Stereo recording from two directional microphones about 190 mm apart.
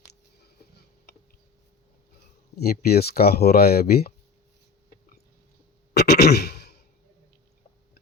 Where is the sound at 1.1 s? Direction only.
60° left (ahead or behind).